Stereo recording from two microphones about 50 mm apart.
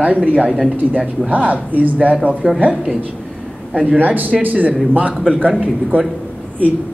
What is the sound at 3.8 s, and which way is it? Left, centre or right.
Speech, right.